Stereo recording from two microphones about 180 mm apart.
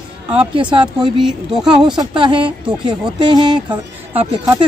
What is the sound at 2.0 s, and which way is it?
Speech, 25° right (ahead or behind).